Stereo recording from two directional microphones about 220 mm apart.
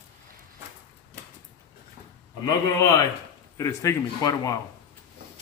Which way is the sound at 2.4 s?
15° left (ahead or behind).